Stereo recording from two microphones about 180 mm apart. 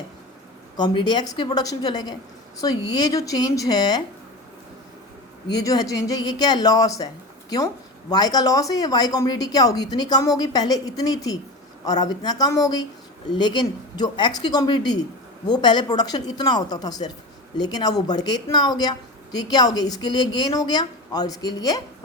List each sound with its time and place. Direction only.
0.8 s a woman's voice: 25° left (ahead or behind)
5.5 s a woman's voice: 20° left (ahead or behind)
8.1 s a woman's voice: 20° left (ahead or behind)